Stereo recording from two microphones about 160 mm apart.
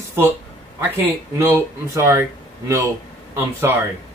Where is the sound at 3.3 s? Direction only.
15° right (ahead or behind).